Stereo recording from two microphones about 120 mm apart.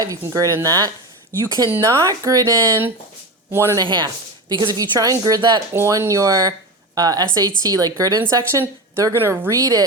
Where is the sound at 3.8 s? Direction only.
40° right (ahead or behind).